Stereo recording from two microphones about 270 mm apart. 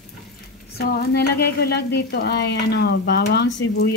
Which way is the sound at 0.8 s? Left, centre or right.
Left.